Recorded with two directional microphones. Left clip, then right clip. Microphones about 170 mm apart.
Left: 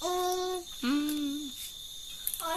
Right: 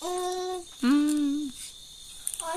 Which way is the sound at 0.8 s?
50° right (ahead or behind).